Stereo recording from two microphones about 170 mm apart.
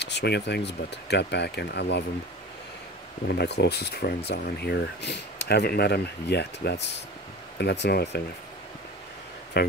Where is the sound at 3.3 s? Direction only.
75° left (ahead or behind).